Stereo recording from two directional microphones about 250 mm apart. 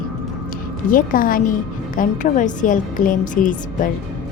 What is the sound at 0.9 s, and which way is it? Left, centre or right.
A woman's voice, left.